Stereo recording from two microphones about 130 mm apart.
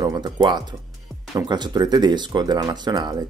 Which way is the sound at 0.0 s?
30° right (ahead or behind).